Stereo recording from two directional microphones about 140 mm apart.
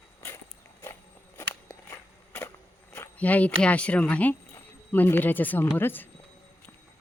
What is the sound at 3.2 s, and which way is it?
Speech, 10° left (ahead or behind).